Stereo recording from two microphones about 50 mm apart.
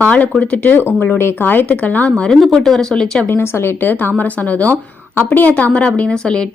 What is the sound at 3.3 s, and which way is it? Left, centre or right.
A woman's voice, left.